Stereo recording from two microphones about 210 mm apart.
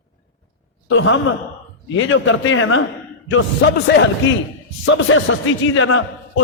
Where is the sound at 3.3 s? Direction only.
60° left (ahead or behind).